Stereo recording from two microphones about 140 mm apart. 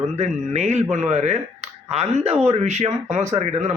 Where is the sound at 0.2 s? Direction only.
55° right (ahead or behind).